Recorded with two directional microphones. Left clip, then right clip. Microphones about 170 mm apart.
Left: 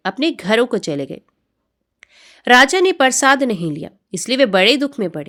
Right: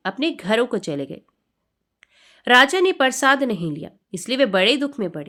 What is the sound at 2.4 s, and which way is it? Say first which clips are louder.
A woman's voice: left 3 dB; 50° left (ahead or behind).